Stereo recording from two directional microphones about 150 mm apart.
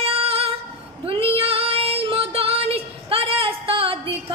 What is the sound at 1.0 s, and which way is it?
Child singing, 40° right (ahead or behind).